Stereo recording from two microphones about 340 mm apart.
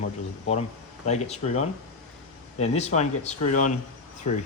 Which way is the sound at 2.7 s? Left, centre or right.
Centre.